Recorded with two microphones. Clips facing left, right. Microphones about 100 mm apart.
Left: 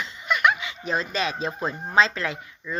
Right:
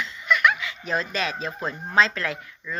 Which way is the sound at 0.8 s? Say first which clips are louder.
Left 1 dB; 5° left (ahead or behind).